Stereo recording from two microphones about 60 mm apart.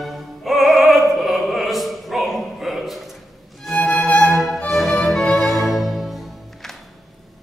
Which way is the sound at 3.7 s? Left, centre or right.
Centre.